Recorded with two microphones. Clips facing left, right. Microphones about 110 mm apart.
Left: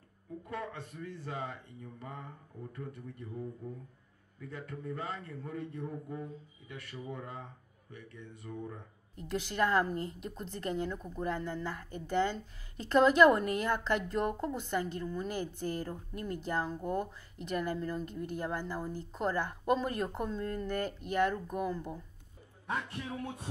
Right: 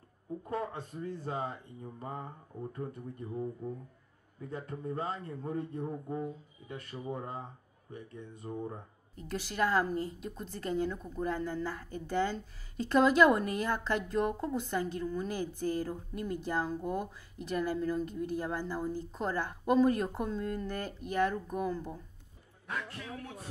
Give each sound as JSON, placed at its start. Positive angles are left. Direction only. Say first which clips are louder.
{"t": 0.4, "sound": "speech", "louder": "right 4 dB", "side_deg": -35}
{"t": 9.2, "sound": "a woman's voice", "louder": "left 1 dB", "side_deg": -5}
{"t": 22.7, "sound": "a man's voice", "louder": "left 3 dB", "side_deg": 25}